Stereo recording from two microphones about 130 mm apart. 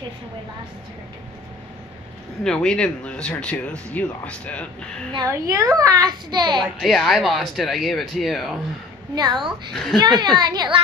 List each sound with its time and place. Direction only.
2.4 s speech: 5° left (ahead or behind)
5.1 s a child's voice: 25° right (ahead or behind)
6.6 s speech: centre (ahead or behind)
9.1 s a child's voice: 35° right (ahead or behind)